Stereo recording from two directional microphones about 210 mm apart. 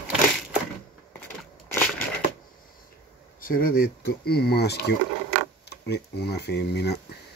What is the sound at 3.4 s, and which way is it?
Speech, 40° left (ahead or behind).